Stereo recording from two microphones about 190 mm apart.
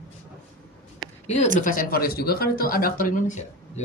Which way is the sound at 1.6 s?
45° left (ahead or behind).